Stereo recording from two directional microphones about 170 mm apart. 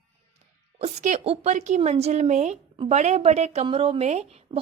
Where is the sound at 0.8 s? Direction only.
40° right (ahead or behind).